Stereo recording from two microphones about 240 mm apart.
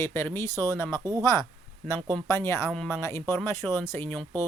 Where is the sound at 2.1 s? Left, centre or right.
Centre.